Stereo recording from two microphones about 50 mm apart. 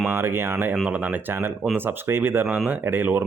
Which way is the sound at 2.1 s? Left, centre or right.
Right.